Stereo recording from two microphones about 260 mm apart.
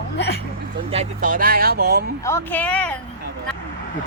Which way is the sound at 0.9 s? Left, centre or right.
Right.